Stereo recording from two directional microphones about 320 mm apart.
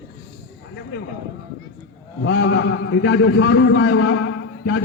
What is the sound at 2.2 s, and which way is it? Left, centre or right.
A man's voice, left.